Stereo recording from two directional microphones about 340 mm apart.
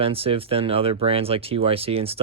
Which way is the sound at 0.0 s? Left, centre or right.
Centre.